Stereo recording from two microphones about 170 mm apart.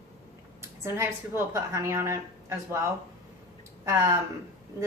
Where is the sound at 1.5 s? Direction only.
15° right (ahead or behind).